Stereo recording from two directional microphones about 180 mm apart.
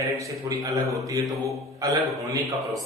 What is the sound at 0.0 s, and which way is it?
Speech, 15° right (ahead or behind).